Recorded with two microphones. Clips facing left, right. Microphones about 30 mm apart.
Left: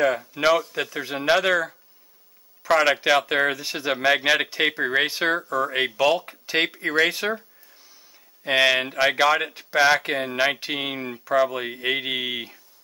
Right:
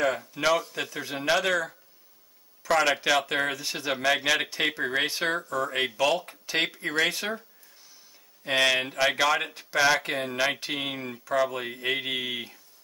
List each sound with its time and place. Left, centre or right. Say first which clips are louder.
0.0 s speech: left 5 dB; centre
4.4 s speech: left 4 dB; centre
8.5 s speech: left 4 dB; centre